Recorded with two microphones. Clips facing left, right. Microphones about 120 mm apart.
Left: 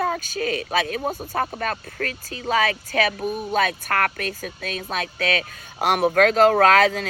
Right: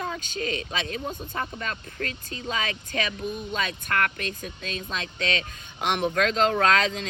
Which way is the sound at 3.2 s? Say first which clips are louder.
Left 7 dB; 55° left (ahead or behind).